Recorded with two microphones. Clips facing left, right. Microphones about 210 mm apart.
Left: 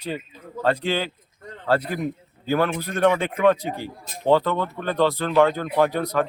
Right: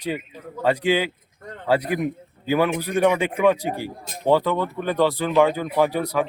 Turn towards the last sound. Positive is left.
turn(degrees=-10)  # may be behind; listen again after turning